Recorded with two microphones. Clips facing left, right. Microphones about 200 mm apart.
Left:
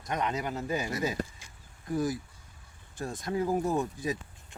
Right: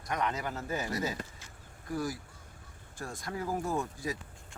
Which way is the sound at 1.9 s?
20° left (ahead or behind).